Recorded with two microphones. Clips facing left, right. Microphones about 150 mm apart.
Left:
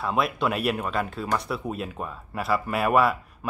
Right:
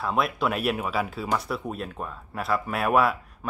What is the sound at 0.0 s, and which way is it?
Speech, centre (ahead or behind).